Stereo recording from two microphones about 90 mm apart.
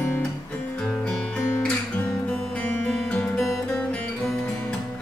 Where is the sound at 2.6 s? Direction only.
10° left (ahead or behind).